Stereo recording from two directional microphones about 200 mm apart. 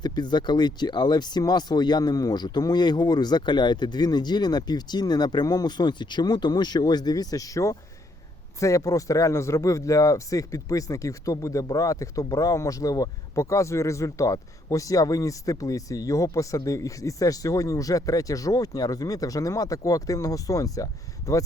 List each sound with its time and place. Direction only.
0.0 s speech: 20° left (ahead or behind)